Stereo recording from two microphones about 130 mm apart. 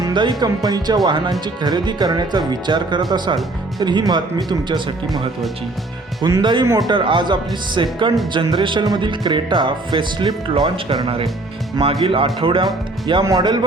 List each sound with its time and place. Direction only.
0.0 s music: 35° right (ahead or behind)
11.8 s speech: 45° right (ahead or behind)
13.2 s music: 35° right (ahead or behind)